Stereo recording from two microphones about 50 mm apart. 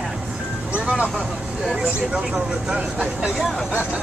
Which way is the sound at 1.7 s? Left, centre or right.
Centre.